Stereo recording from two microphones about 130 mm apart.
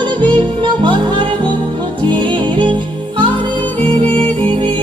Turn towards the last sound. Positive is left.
turn(degrees=-45)  # may be behind; listen again after turning